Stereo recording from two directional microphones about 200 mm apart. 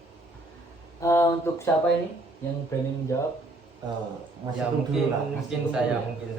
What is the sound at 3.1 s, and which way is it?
Speech, 15° left (ahead or behind).